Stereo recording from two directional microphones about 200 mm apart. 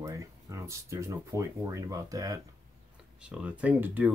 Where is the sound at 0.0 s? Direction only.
15° right (ahead or behind).